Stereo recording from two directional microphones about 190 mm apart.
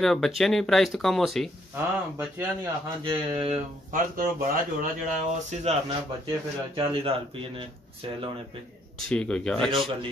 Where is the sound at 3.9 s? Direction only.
50° right (ahead or behind).